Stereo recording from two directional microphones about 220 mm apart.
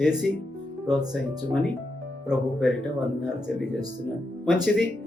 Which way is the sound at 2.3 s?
Centre (ahead or behind).